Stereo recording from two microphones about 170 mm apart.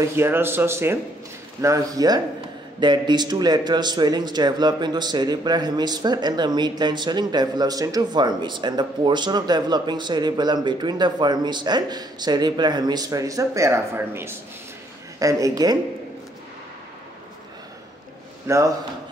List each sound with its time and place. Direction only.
0.0 s a man's voice: 15° right (ahead or behind)
18.5 s speech: 15° right (ahead or behind)